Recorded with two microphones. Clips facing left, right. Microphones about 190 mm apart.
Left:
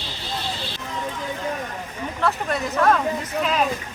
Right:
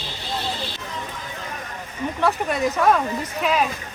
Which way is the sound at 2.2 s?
10° right (ahead or behind).